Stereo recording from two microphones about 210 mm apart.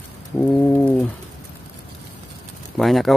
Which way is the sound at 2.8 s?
Centre (ahead or behind).